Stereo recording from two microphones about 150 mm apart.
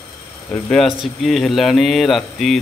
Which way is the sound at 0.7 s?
Centre (ahead or behind).